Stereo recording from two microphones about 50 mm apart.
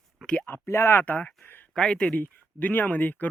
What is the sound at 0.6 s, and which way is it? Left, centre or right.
Speech, left.